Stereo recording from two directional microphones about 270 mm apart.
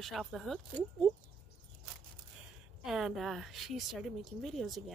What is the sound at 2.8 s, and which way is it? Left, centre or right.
A woman's voice, centre.